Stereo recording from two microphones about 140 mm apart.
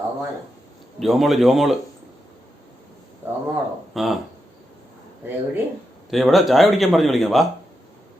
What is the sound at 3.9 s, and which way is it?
Speech, centre (ahead or behind).